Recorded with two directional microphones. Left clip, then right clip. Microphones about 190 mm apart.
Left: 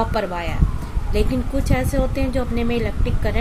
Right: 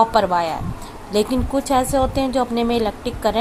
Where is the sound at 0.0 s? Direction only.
20° right (ahead or behind).